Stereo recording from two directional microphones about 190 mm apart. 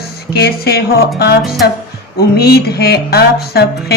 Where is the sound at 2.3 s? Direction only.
55° left (ahead or behind).